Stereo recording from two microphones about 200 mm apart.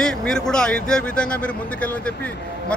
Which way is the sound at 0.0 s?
5° left (ahead or behind).